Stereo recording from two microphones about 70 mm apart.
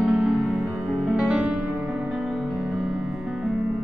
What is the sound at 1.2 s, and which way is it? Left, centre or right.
Music, centre.